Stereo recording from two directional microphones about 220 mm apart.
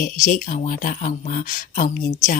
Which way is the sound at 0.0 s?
35° left (ahead or behind).